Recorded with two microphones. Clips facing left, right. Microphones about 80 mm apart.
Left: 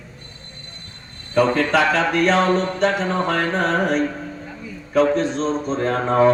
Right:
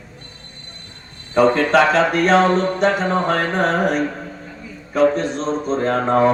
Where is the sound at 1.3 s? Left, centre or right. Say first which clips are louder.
Right 3 dB; right.